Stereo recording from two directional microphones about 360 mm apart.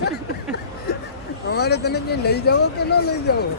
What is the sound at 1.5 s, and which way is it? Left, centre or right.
Speech, left.